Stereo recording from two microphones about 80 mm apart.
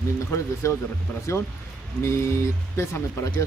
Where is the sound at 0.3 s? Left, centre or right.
Left.